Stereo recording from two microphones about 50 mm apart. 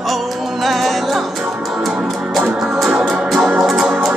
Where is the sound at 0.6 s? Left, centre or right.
Centre.